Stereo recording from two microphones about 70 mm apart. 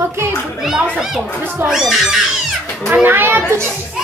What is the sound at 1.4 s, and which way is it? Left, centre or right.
Speech, right.